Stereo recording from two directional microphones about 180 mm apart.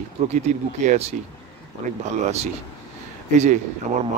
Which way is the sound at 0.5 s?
40° right (ahead or behind).